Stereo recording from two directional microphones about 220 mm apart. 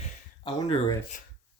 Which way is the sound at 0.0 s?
20° left (ahead or behind).